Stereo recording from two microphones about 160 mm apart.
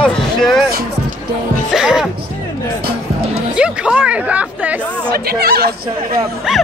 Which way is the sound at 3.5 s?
5° right (ahead or behind).